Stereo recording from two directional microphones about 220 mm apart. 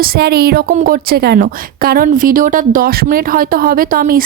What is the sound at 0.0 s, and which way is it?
A woman's voice, 45° right (ahead or behind).